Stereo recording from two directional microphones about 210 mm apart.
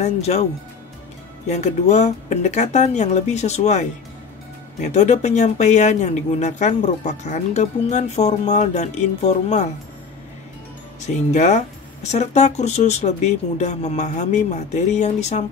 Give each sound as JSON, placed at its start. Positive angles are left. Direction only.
{"t": 0.0, "sound": "speech", "side_deg": 30}
{"t": 1.5, "sound": "speech", "side_deg": 35}
{"t": 4.8, "sound": "speech", "side_deg": 35}
{"t": 11.0, "sound": "speech", "side_deg": 35}